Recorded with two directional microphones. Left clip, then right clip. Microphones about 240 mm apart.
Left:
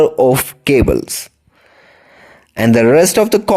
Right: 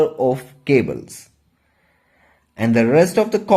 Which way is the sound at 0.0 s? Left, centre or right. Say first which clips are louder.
Left 7 dB; left.